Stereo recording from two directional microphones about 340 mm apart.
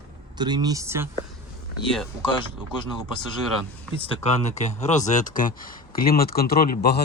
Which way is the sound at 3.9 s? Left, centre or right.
Centre.